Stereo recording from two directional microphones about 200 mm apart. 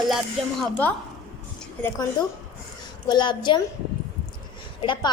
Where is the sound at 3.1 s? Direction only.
20° left (ahead or behind).